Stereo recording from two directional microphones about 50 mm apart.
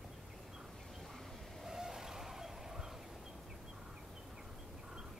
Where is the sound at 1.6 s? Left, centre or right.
Centre.